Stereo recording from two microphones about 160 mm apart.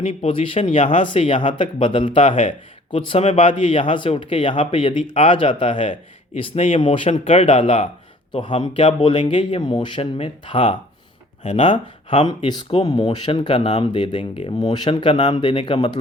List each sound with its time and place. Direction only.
0.0 s speech: 40° left (ahead or behind)
11.4 s speech: 50° left (ahead or behind)
12.5 s speech: 30° left (ahead or behind)